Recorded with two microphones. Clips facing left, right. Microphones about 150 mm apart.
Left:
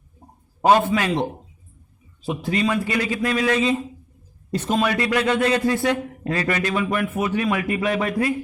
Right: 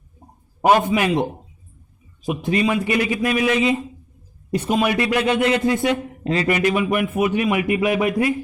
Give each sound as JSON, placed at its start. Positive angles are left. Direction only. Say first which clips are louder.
{"t": 0.6, "sound": "speech", "louder": "right 1 dB", "side_deg": -15}
{"t": 2.2, "sound": "speech", "louder": "right 2 dB", "side_deg": -15}